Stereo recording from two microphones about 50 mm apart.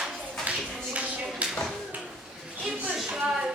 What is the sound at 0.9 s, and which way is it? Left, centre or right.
Clapping, right.